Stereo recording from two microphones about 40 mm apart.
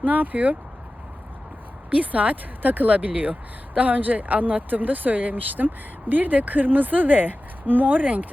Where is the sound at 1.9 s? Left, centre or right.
Right.